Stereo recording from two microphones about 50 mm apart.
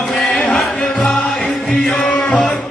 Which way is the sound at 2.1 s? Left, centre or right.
Left.